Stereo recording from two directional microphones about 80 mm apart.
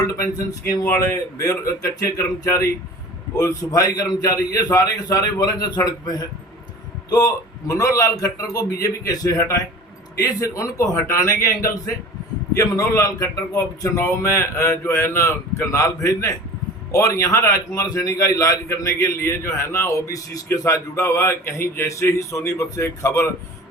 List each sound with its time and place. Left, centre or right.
0.0 s a man's voice: left